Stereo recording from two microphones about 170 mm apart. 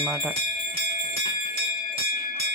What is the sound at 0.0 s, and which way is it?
Speech, 10° right (ahead or behind).